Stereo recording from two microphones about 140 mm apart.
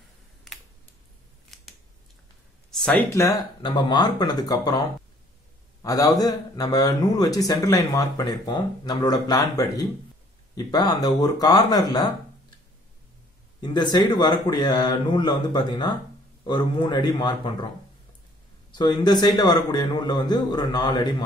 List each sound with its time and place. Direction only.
1.5 s scissors: centre (ahead or behind)
3.1 s speech: 25° left (ahead or behind)
13.6 s speech: 30° left (ahead or behind)
18.7 s speech: 30° left (ahead or behind)